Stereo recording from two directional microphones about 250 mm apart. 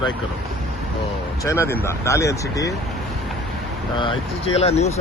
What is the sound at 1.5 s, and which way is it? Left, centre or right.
Speech, centre.